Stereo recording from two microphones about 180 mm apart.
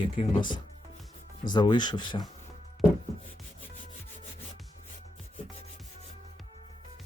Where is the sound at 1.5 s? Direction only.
25° left (ahead or behind).